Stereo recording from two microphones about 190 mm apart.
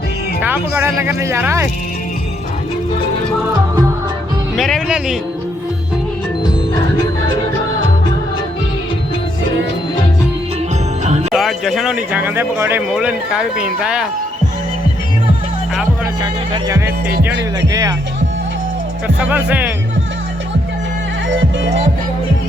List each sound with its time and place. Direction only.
0.4 s speech: 10° right (ahead or behind)
4.5 s speech: centre (ahead or behind)
11.0 s music: 35° right (ahead or behind)
11.3 s speech: centre (ahead or behind)
16.2 s speech: 20° right (ahead or behind)
19.0 s speech: 10° right (ahead or behind)